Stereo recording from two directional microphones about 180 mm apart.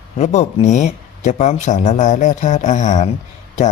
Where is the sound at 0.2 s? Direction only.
40° left (ahead or behind).